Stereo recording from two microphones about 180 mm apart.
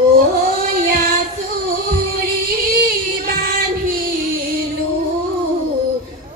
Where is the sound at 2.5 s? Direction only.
55° right (ahead or behind).